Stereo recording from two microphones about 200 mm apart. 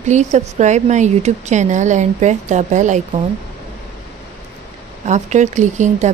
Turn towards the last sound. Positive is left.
turn(degrees=-35)  # may be behind; listen again after turning